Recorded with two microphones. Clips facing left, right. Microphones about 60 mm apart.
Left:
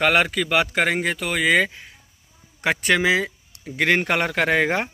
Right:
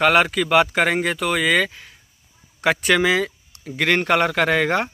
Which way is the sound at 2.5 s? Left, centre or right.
Centre.